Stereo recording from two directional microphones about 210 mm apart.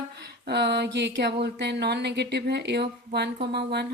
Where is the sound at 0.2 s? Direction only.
55° right (ahead or behind).